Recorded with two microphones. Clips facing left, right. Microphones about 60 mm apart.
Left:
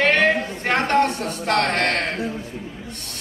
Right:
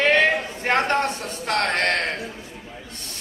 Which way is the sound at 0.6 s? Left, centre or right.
Left.